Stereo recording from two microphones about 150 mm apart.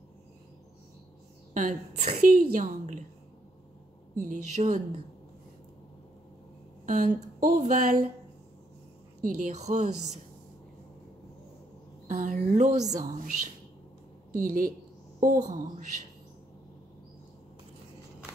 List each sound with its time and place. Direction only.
1.5 s a woman's voice: 60° right (ahead or behind)
4.1 s speech: 55° right (ahead or behind)
6.9 s speech: 60° right (ahead or behind)
9.2 s speech: 60° right (ahead or behind)
12.1 s speech: 50° right (ahead or behind)
13.0 s a woman's voice: 65° right (ahead or behind)
14.3 s a woman's voice: 65° right (ahead or behind)
15.4 s speech: 50° right (ahead or behind)